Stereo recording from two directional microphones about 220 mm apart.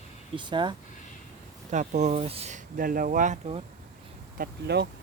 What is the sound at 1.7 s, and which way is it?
Speech, 35° right (ahead or behind).